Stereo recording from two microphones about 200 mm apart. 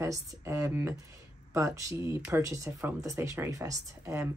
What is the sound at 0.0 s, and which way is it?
Speech, 15° right (ahead or behind).